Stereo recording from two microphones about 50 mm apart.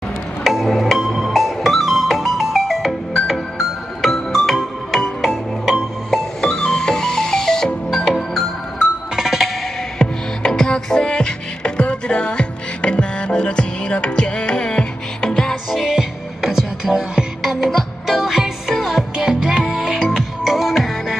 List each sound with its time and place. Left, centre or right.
0.4 s music: centre
5.8 s music: centre
8.7 s music: centre
9.9 s music: centre
15.7 s music: centre
20.2 s music: centre